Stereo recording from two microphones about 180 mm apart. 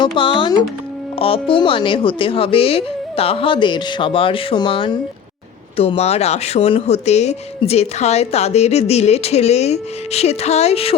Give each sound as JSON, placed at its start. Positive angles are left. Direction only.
{"t": 0.0, "sound": "a woman's voice", "side_deg": 25}